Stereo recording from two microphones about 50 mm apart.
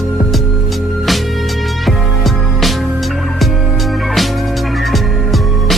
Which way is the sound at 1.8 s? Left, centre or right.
Centre.